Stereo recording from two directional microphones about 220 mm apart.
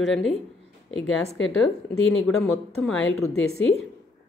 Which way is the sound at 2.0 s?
65° left (ahead or behind).